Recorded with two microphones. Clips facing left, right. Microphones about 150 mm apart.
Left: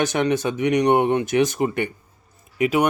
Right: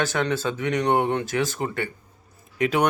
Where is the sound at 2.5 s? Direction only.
10° left (ahead or behind).